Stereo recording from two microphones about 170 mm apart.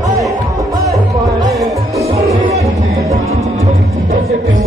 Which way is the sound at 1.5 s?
Centre (ahead or behind).